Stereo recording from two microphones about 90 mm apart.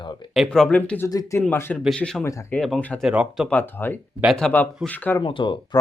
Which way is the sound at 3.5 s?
20° left (ahead or behind).